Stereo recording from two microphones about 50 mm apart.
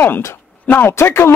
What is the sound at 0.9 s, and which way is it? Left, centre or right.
Speech, left.